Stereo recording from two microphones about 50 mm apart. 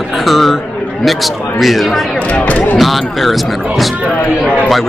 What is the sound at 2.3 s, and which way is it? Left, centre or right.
Speech, left.